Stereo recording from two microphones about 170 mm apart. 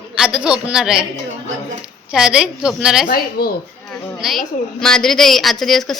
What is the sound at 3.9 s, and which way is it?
A woman's voice, centre (ahead or behind).